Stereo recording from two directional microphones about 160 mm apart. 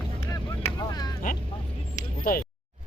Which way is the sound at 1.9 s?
60° left (ahead or behind).